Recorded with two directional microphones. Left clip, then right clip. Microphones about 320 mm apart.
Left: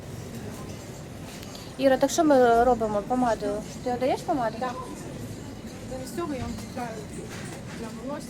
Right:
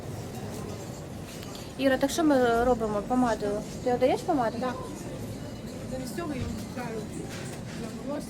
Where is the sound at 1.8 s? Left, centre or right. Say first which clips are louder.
Left 4 dB; centre.